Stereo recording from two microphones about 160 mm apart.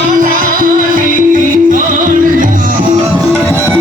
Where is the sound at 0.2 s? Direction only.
60° right (ahead or behind).